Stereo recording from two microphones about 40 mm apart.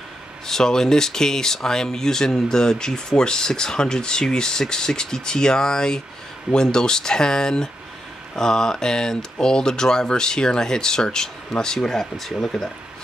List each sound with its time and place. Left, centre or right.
0.5 s speech: centre